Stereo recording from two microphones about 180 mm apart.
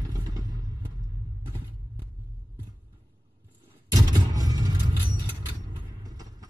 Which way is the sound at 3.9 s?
20° right (ahead or behind).